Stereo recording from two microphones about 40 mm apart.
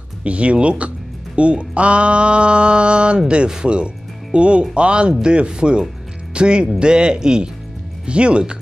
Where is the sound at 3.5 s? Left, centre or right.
Right.